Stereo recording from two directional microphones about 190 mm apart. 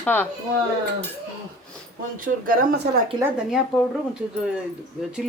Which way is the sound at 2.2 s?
45° right (ahead or behind).